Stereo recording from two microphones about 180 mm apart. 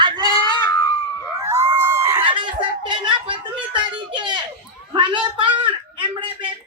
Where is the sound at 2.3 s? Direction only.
25° right (ahead or behind).